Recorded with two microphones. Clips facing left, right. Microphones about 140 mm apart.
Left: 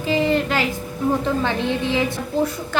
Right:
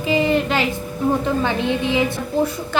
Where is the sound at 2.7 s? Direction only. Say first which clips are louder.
Right 1 dB; 20° right (ahead or behind).